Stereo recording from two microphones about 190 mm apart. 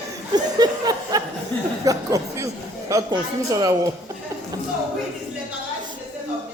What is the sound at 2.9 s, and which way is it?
A man's voice, 20° right (ahead or behind).